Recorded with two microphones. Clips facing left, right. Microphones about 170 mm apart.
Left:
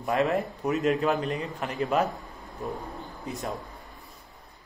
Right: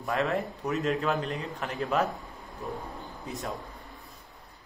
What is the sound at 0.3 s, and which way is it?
A man's voice, 5° left (ahead or behind).